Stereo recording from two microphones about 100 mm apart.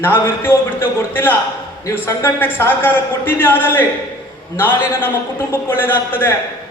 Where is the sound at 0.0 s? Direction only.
20° left (ahead or behind).